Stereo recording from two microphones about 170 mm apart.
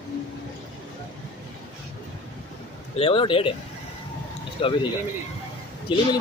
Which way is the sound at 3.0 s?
30° left (ahead or behind).